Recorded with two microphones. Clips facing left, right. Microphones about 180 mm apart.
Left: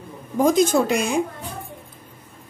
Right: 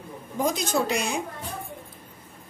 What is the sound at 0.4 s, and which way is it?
Speech, 50° left (ahead or behind).